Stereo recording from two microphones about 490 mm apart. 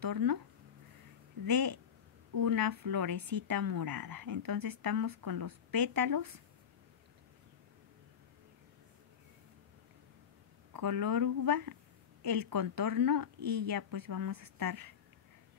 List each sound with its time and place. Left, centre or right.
0.0 s speech: right
1.4 s speech: right
10.7 s speech: right